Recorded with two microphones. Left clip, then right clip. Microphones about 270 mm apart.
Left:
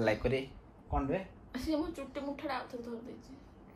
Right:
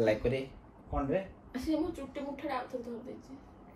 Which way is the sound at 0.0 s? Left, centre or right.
Centre.